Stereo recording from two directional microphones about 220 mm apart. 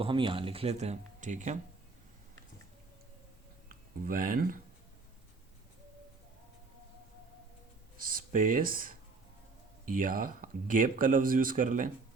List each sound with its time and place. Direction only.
0.0 s speech: 25° right (ahead or behind)
3.7 s speech: 40° right (ahead or behind)
7.9 s speech: 40° right (ahead or behind)